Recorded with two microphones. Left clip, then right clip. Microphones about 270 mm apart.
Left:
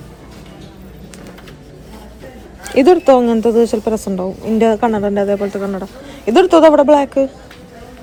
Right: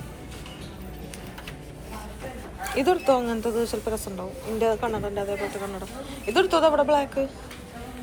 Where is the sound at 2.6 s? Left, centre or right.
Left.